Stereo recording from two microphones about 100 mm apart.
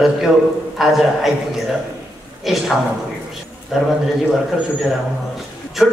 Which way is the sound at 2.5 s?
Centre (ahead or behind).